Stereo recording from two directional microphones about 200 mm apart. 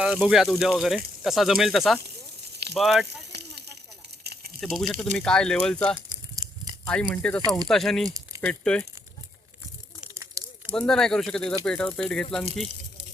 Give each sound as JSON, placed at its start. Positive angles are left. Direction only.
{"t": 0.0, "sound": "speech", "side_deg": -5}
{"t": 4.2, "sound": "a sound", "side_deg": -50}
{"t": 4.6, "sound": "speech", "side_deg": 0}
{"t": 6.1, "sound": "crumpling", "side_deg": -20}
{"t": 7.1, "sound": "speech", "side_deg": 5}
{"t": 10.0, "sound": "a sound", "side_deg": -10}
{"t": 10.7, "sound": "speech", "side_deg": 5}